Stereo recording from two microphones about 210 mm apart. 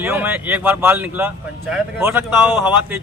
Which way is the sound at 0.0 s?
10° right (ahead or behind).